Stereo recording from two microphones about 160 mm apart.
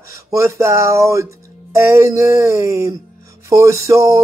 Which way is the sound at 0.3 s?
20° right (ahead or behind).